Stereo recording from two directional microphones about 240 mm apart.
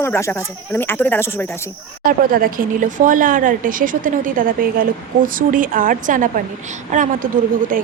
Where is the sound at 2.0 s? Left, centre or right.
Right.